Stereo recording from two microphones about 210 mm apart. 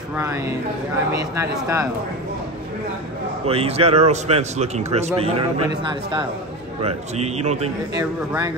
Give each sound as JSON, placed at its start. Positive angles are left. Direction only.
{"t": 0.1, "sound": "speech", "side_deg": -10}
{"t": 3.4, "sound": "a man's voice", "side_deg": -30}
{"t": 7.9, "sound": "speech", "side_deg": -15}